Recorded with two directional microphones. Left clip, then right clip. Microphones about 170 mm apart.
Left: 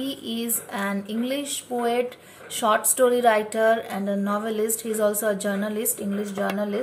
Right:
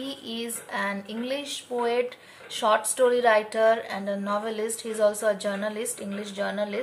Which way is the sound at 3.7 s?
25° right (ahead or behind).